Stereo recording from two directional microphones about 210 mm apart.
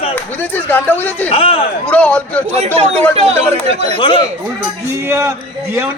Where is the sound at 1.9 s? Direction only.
5° left (ahead or behind).